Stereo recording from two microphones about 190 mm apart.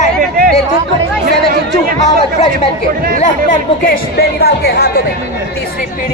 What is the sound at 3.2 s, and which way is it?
Speech, 40° left (ahead or behind).